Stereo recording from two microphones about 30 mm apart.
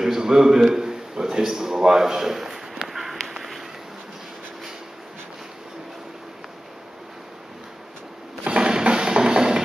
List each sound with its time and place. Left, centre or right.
0.0 s a man's voice: centre
3.3 s a sound: centre
8.5 s drum: right